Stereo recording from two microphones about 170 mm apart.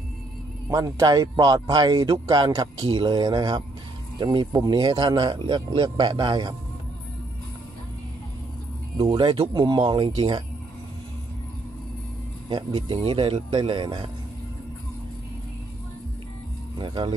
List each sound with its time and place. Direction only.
0.7 s speech: 20° right (ahead or behind)
8.9 s speech: 25° right (ahead or behind)
12.4 s speech: 25° right (ahead or behind)
16.7 s speech: 25° right (ahead or behind)